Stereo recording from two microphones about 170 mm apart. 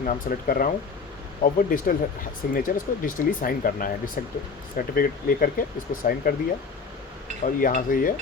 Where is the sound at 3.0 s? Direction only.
55° left (ahead or behind).